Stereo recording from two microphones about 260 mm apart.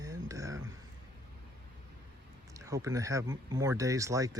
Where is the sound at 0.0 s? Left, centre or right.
Centre.